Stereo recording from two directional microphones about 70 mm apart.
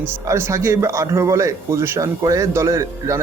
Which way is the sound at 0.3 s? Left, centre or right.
Right.